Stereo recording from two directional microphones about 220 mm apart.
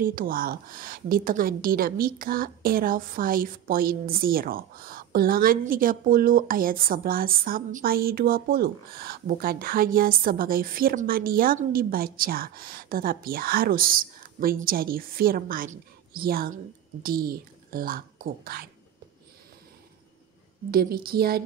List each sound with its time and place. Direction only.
0.0 s a woman's voice: 40° right (ahead or behind)
20.7 s a woman's voice: 45° right (ahead or behind)